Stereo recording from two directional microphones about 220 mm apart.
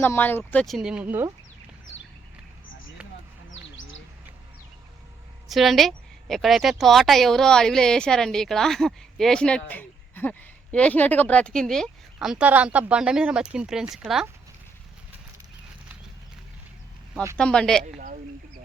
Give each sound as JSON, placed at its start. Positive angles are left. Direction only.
{"t": 0.0, "sound": "speech", "side_deg": 10}
{"t": 3.5, "sound": "bird", "side_deg": 60}
{"t": 5.5, "sound": "speech", "side_deg": 0}
{"t": 17.3, "sound": "speech", "side_deg": 5}
{"t": 17.8, "sound": "speech", "side_deg": -35}